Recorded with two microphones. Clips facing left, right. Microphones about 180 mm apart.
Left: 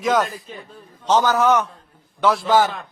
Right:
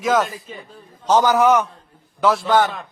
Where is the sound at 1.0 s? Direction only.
10° right (ahead or behind).